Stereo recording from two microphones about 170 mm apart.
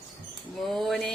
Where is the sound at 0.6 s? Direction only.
Centre (ahead or behind).